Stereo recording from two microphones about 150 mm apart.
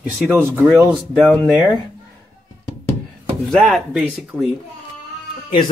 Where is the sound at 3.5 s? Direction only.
Centre (ahead or behind).